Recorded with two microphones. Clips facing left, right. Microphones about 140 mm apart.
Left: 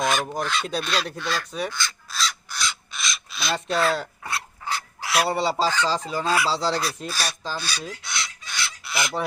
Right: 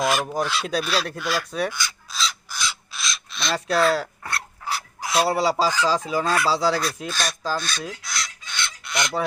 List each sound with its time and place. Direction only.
0.0 s speech: 5° right (ahead or behind)
2.0 s crow: centre (ahead or behind)
4.9 s filing: 20° right (ahead or behind)
5.3 s speech: 5° right (ahead or behind)
6.2 s speech: 5° left (ahead or behind)
7.1 s chicken: 5° left (ahead or behind)